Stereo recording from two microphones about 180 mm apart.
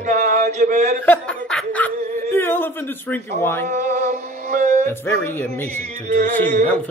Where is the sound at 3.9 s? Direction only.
65° right (ahead or behind).